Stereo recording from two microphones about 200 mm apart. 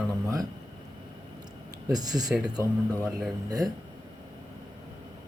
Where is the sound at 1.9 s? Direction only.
20° right (ahead or behind).